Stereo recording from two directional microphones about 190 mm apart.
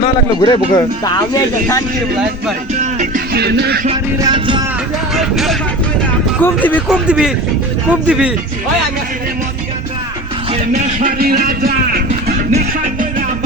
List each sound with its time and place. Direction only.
0.0 s speech: 25° left (ahead or behind)
2.7 s music: 40° right (ahead or behind)
3.3 s music: 60° right (ahead or behind)
4.2 s music: 25° right (ahead or behind)
5.1 s vehicle: centre (ahead or behind)
6.4 s speech: 10° left (ahead or behind)
7.1 s speech: 5° right (ahead or behind)
10.5 s speech: 40° right (ahead or behind)
12.5 s music: 45° right (ahead or behind)